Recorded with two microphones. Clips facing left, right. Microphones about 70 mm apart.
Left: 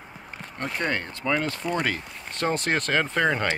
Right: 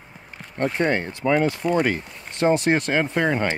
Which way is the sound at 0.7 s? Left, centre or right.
Right.